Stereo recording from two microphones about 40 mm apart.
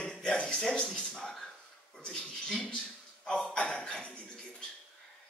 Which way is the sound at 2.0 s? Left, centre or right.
Left.